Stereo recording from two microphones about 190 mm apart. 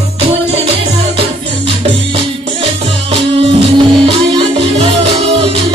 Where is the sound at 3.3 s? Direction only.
30° right (ahead or behind).